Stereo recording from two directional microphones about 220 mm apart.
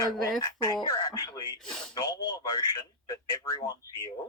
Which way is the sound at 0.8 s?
20° left (ahead or behind).